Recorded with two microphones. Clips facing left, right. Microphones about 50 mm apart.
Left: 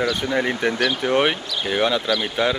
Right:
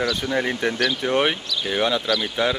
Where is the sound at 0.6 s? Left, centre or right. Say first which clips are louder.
Left 2 dB; left.